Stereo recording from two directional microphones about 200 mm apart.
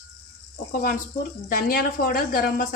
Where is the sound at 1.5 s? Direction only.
50° left (ahead or behind).